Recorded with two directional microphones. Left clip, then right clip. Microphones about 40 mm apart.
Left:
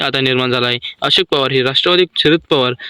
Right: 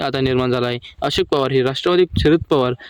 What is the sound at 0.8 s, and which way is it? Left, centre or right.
Speech, right.